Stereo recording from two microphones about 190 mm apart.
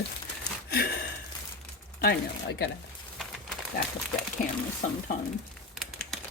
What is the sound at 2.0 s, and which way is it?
Speech, 60° left (ahead or behind).